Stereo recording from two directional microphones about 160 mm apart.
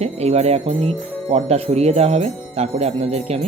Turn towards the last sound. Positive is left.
turn(degrees=-40)  # may be behind; listen again after turning